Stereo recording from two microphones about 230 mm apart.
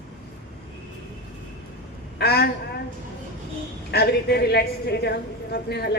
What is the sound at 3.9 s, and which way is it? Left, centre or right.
A woman's voice, left.